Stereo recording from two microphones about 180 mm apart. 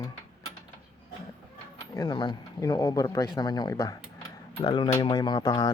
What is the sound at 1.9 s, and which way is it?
Speech, 25° left (ahead or behind).